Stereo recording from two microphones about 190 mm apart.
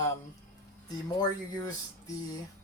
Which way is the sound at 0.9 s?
20° left (ahead or behind).